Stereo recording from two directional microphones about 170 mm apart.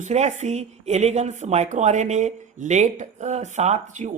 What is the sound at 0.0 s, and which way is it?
Speech, 45° right (ahead or behind).